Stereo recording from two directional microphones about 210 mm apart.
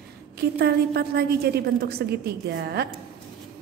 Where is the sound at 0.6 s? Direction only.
50° right (ahead or behind).